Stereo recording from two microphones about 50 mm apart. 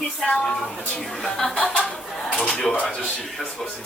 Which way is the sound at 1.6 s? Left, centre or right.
Centre.